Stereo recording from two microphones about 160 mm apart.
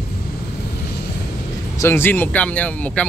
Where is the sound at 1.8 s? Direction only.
15° left (ahead or behind).